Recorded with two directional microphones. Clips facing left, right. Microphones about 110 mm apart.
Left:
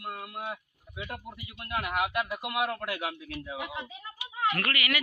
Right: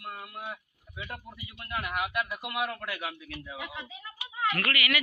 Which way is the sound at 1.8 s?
15° left (ahead or behind).